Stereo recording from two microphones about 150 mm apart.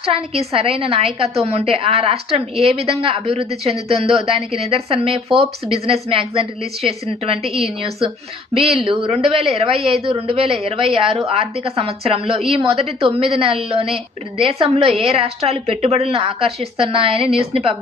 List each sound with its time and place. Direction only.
0.0 s a woman's voice: 40° right (ahead or behind)